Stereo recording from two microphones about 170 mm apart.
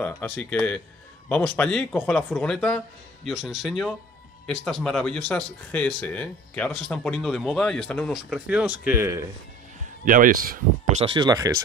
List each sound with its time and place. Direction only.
0.0 s speech: 10° left (ahead or behind); by 9.2 s 15° right (ahead or behind)
10.0 s speech: 55° right (ahead or behind)
11.0 s speech: 30° right (ahead or behind)